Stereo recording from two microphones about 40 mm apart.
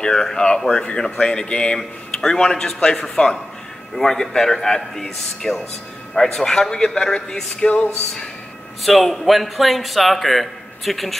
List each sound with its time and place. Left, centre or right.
0.0 s a man's voice: centre
7.6 s a sound: left
8.8 s a man's voice: centre